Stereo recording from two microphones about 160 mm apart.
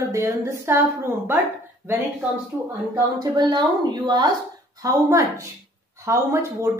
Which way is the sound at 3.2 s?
25° right (ahead or behind).